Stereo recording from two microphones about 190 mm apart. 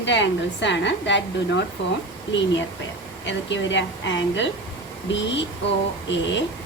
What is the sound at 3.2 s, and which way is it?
A woman's voice, 70° left (ahead or behind).